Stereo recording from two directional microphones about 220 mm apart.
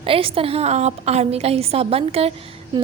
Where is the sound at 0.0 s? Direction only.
25° right (ahead or behind).